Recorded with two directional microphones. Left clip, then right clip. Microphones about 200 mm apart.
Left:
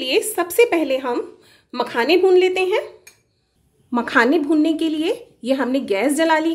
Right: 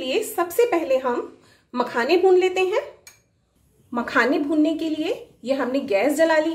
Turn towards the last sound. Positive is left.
turn(degrees=45)  # may be behind; listen again after turning